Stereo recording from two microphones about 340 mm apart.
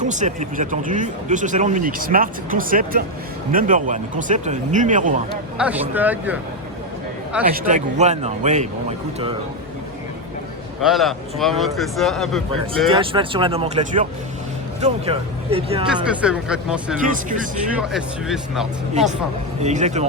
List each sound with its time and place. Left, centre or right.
0.0 s speech: right
5.5 s speech: centre
7.5 s speech: right
10.8 s speech: centre
12.9 s speech: centre
16.0 s speech: centre
17.1 s speech: right
17.7 s speech: centre
19.6 s speech: centre